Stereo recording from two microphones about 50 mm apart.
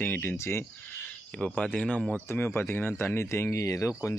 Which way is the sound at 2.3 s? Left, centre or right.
Left.